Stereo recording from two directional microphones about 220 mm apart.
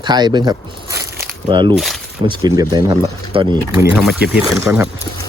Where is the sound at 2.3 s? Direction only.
15° right (ahead or behind).